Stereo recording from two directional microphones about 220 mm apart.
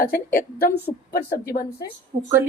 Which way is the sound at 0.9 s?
30° left (ahead or behind).